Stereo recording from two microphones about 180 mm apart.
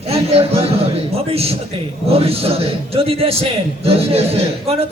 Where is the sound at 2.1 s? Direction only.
35° right (ahead or behind).